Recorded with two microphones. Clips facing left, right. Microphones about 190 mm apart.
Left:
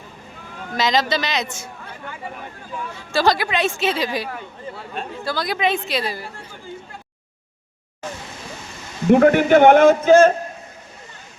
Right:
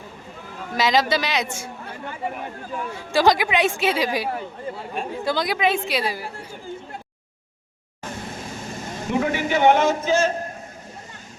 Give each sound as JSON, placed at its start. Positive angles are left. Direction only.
{"t": 0.7, "sound": "speech", "side_deg": -10}
{"t": 2.9, "sound": "speech", "side_deg": -15}
{"t": 5.5, "sound": "speech", "side_deg": -10}
{"t": 8.0, "sound": "vehicle", "side_deg": -55}
{"t": 9.0, "sound": "a man's voice", "side_deg": 55}